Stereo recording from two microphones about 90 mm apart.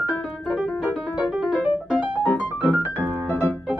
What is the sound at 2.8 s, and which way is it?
Music, 25° right (ahead or behind).